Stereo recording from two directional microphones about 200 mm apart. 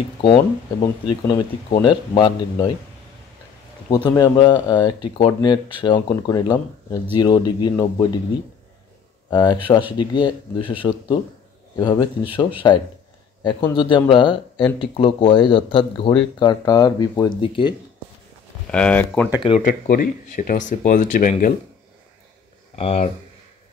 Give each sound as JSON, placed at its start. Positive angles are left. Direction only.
{"t": 0.2, "sound": "speech", "side_deg": 25}
{"t": 3.9, "sound": "speech", "side_deg": 20}
{"t": 9.3, "sound": "a man's voice", "side_deg": 20}
{"t": 18.7, "sound": "speech", "side_deg": 5}
{"t": 19.6, "sound": "speech", "side_deg": 45}
{"t": 22.8, "sound": "speech", "side_deg": 30}